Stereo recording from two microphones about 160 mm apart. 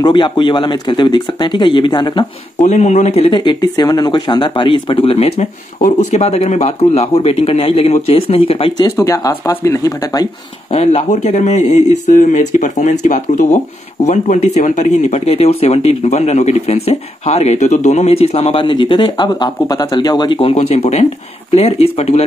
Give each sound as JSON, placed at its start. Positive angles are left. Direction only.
{"t": 0.0, "sound": "speech", "side_deg": 25}
{"t": 2.6, "sound": "speech", "side_deg": 45}
{"t": 5.8, "sound": "speech", "side_deg": 60}
{"t": 6.1, "sound": "speech", "side_deg": 40}
{"t": 8.9, "sound": "speech", "side_deg": 20}
{"t": 10.7, "sound": "speech", "side_deg": 40}